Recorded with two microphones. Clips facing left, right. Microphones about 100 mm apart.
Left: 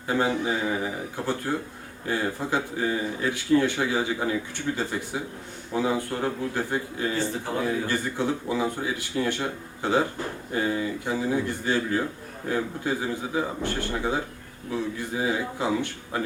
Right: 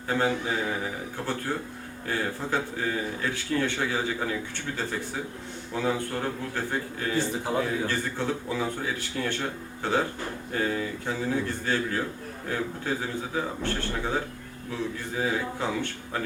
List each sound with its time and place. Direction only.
0.1 s a man's voice: 15° left (ahead or behind)